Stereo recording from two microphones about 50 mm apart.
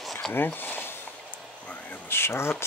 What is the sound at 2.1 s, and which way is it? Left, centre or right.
Speech, left.